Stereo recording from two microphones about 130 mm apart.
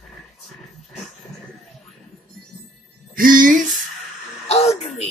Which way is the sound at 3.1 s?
90° right.